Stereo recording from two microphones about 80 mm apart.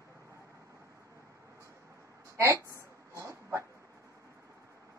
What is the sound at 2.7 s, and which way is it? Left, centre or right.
Dog, right.